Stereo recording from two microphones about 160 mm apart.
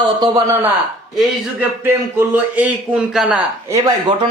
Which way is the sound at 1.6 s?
10° right (ahead or behind).